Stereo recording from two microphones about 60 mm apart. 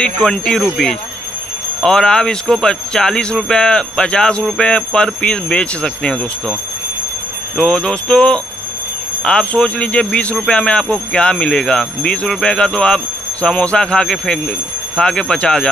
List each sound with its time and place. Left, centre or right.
0.0 s speech: centre
1.8 s speech: centre
7.5 s speech: centre